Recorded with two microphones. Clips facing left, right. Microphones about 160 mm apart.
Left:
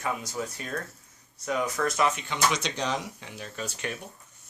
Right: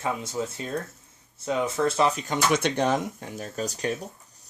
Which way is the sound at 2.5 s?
55° right (ahead or behind).